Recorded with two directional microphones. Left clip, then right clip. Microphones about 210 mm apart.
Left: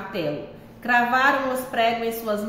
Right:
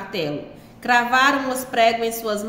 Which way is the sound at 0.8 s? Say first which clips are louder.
Right 2 dB; 45° right (ahead or behind).